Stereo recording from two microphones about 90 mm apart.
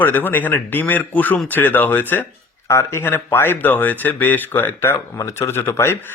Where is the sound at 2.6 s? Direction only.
30° left (ahead or behind).